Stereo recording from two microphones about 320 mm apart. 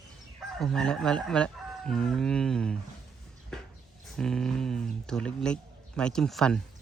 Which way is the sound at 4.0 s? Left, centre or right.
Centre.